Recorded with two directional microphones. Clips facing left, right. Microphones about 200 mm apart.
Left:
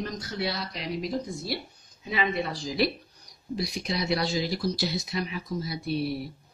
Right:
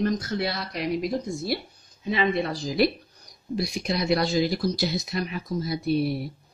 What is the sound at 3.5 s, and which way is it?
Speech, 50° right (ahead or behind).